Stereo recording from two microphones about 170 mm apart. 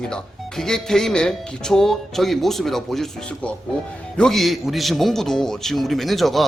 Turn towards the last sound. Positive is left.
turn(degrees=0)  # may be behind; listen again after turning